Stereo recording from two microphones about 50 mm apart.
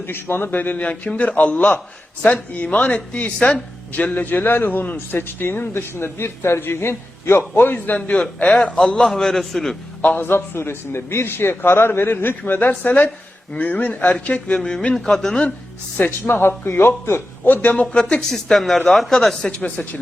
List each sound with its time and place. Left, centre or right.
0.0 s a man's voice: left
7.9 s a man's voice: left; by 9.7 s centre
10.0 s a man's voice: left
14.6 s a man's voice: centre
16.0 s speech: left
16.4 s a man's voice: left
17.5 s speech: left
18.2 s speech: centre
19.5 s speech: left